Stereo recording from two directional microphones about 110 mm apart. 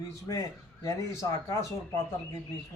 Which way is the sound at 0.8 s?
30° left (ahead or behind).